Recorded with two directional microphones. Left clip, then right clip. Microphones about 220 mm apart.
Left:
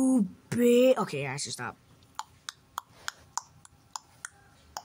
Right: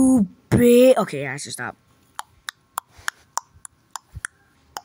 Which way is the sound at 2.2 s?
25° right (ahead or behind).